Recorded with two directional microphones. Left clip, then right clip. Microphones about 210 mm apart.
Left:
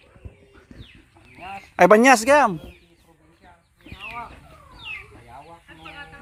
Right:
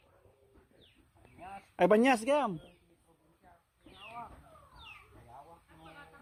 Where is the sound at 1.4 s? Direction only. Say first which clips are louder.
Left 11 dB; 40° left (ahead or behind).